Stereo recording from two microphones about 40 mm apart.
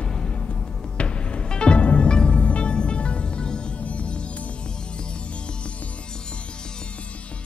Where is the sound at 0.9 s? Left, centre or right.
Left.